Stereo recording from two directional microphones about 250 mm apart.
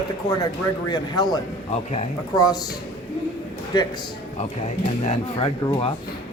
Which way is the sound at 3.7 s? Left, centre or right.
Centre.